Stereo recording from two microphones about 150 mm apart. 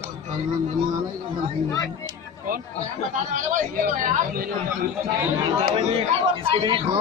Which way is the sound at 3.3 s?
65° right (ahead or behind).